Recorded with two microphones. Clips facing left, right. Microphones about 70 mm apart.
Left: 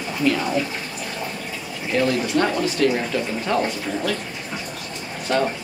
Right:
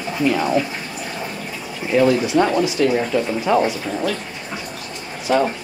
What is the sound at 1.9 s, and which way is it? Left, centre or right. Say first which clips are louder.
Speech: right 5 dB; centre.